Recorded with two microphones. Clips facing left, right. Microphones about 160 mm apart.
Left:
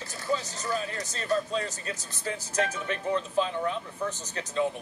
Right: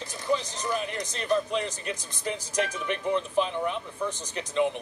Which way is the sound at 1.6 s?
15° right (ahead or behind).